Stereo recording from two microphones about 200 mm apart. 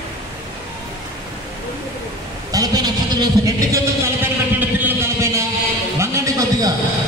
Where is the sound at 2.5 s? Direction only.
20° right (ahead or behind).